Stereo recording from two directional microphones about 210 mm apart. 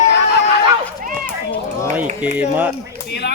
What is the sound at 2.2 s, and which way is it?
Speech, 10° right (ahead or behind).